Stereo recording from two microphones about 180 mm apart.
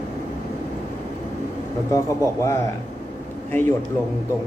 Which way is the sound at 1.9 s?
15° left (ahead or behind).